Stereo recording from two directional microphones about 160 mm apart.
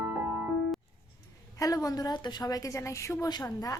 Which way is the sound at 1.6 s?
20° left (ahead or behind).